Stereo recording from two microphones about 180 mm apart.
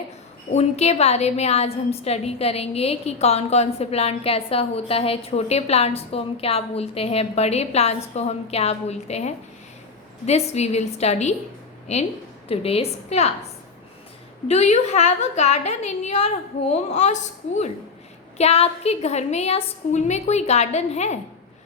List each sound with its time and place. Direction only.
0.5 s a woman's voice: 35° left (ahead or behind)
14.4 s a woman's voice: 40° left (ahead or behind)